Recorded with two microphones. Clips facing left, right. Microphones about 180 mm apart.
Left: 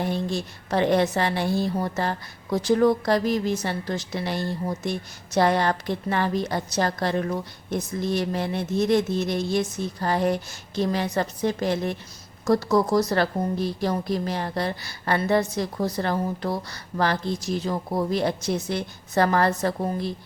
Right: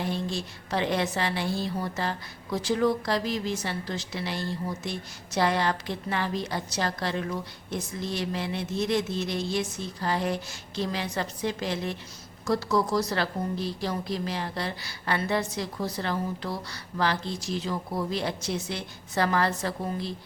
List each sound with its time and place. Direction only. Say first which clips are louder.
0.0 s a woman's voice: left 4 dB; 55° left (ahead or behind)